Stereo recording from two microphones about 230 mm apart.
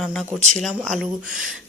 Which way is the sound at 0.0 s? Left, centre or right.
Centre.